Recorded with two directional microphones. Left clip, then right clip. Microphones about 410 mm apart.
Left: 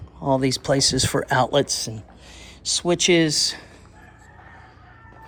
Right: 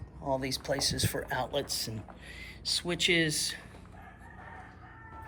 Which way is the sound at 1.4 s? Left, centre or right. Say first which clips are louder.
Left 13 dB; centre.